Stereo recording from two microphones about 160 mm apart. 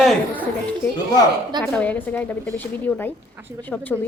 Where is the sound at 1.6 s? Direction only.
10° left (ahead or behind).